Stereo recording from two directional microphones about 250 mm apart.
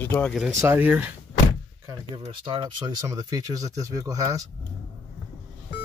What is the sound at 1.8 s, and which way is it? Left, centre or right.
Speech, centre.